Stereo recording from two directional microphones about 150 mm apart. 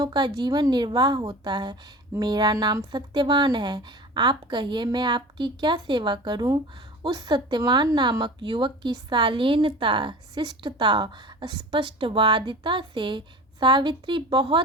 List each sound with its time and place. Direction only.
0.0 s speech: 25° right (ahead or behind)